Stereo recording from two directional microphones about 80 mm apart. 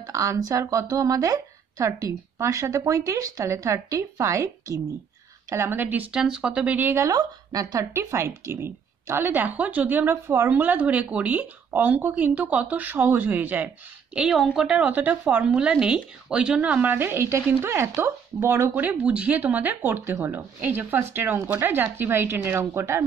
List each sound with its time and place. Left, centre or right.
0.0 s speech: right
5.5 s a woman's voice: right
6.1 s a woman's voice: centre
7.0 s speech: right
7.9 s a woman's voice: right
14.3 s speech: centre
14.6 s a woman's voice: centre; by 18.7 s right
18.8 s a woman's voice: centre; by 23.0 s right